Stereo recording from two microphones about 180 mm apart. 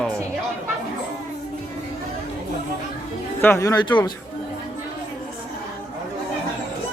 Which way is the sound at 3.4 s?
15° left (ahead or behind).